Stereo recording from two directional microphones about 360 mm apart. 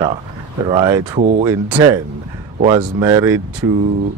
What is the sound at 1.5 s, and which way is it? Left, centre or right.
Speech, centre.